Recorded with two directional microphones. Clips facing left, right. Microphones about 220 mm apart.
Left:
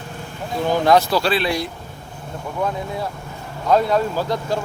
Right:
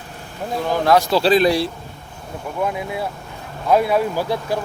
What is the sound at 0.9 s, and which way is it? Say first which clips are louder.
Speech: even; 10° right (ahead or behind).